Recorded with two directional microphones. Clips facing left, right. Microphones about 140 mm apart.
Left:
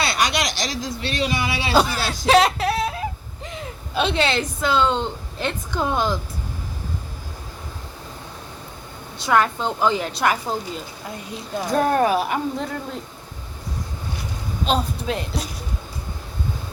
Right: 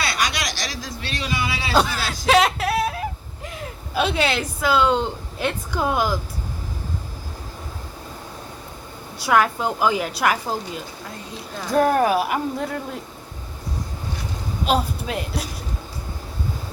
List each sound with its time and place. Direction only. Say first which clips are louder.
0.0 s speech: left 3 dB; 25° left (ahead or behind)
1.7 s speech: left 1 dB; centre (ahead or behind)
2.2 s a sound: left 1 dB; centre (ahead or behind)
3.9 s speech: even; 5° right (ahead or behind)
9.1 s speech: even; 5° right (ahead or behind)
14.6 s a woman's voice: right 1 dB; 5° right (ahead or behind)